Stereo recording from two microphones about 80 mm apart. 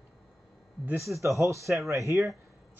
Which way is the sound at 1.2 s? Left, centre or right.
Right.